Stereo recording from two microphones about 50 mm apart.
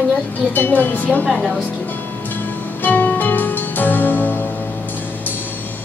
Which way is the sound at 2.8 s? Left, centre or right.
Left.